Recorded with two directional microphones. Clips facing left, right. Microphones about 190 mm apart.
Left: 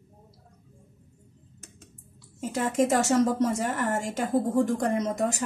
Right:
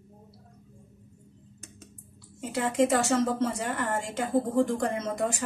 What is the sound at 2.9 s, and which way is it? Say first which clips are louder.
A woman's voice: left 2 dB; 40° left (ahead or behind).